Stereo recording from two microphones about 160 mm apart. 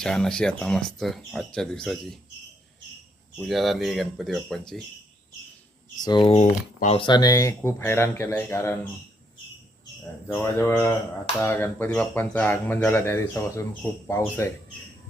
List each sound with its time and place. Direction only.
0.0 s speech: 5° left (ahead or behind)
3.3 s speech: centre (ahead or behind)
6.0 s speech: 30° left (ahead or behind)
10.3 s speech: 15° left (ahead or behind)